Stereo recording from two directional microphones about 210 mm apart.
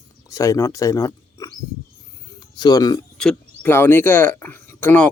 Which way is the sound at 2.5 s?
20° left (ahead or behind).